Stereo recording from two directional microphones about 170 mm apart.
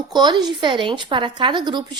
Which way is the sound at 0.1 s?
25° right (ahead or behind).